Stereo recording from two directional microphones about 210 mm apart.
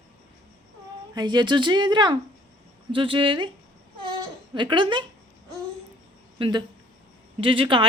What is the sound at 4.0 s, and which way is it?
Baby cry, 20° right (ahead or behind).